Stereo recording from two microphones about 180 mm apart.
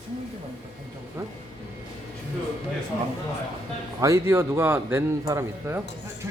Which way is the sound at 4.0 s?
15° right (ahead or behind).